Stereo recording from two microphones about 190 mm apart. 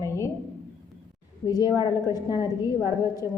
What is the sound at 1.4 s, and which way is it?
A woman's voice, 20° left (ahead or behind).